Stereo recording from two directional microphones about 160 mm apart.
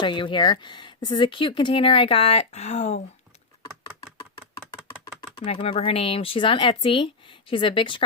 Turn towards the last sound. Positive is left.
turn(degrees=30)  # may be behind; listen again after turning